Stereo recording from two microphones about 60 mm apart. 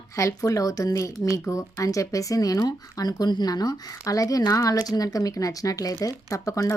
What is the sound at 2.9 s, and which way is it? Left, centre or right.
A woman's voice, left.